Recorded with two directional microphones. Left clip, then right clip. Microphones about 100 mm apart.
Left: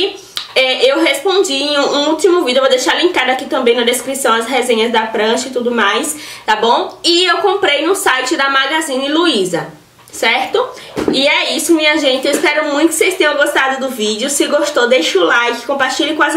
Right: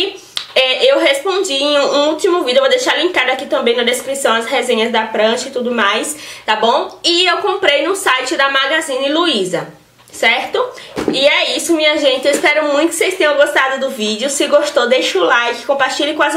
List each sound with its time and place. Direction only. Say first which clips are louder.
0.6 s speech: even; 5° left (ahead or behind)